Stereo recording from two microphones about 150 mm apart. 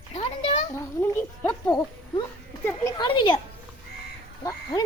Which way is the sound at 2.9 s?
35° left (ahead or behind).